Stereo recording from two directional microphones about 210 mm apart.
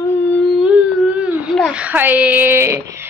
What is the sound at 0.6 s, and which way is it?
Speech, 5° right (ahead or behind).